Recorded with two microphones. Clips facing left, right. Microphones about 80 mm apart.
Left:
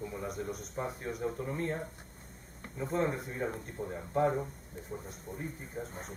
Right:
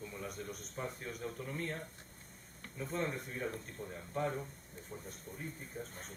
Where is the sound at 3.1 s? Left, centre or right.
Centre.